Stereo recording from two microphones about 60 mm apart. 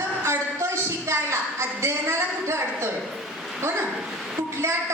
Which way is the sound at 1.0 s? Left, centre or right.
Right.